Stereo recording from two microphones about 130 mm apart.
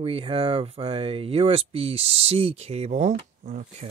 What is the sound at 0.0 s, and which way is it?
Speech, 45° right (ahead or behind).